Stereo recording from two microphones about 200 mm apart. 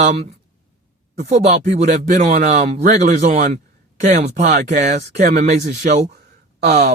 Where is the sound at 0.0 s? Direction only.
30° right (ahead or behind).